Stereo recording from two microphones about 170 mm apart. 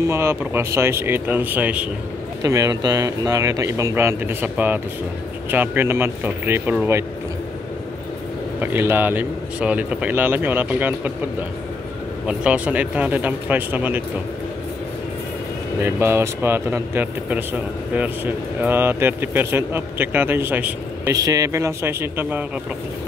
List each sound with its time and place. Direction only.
0.0 s a man's voice: 15° right (ahead or behind)
2.4 s a man's voice: 20° right (ahead or behind)
8.5 s a man's voice: 10° right (ahead or behind)
12.3 s a man's voice: 10° right (ahead or behind)
15.8 s a man's voice: 15° right (ahead or behind)